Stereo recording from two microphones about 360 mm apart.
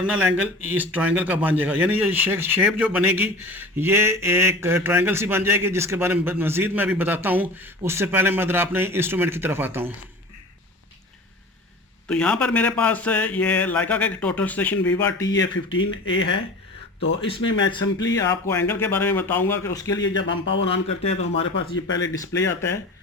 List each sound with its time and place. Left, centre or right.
0.0 s speech: centre
12.0 s speech: centre
15.4 s speech: left
17.2 s speech: centre
20.0 s speech: left
20.7 s speech: centre